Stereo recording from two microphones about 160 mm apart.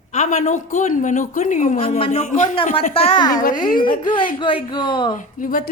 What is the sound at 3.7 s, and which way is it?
Speech, 60° left (ahead or behind).